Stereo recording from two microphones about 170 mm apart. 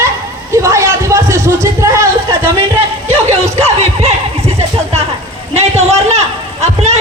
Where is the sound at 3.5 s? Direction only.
40° right (ahead or behind).